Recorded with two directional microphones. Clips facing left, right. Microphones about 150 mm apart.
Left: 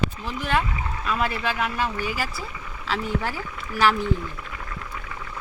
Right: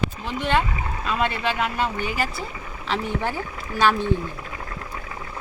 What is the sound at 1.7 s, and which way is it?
Speech, 25° right (ahead or behind).